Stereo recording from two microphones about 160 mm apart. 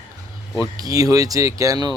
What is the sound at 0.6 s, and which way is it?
Speech, 20° right (ahead or behind).